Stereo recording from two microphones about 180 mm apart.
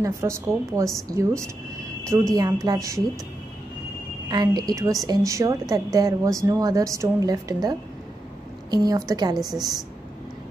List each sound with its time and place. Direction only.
0.0 s a woman's voice: 15° right (ahead or behind)
4.3 s a woman's voice: 25° right (ahead or behind)